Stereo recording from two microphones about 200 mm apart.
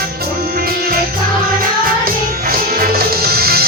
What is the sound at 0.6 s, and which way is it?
Music, 50° right (ahead or behind).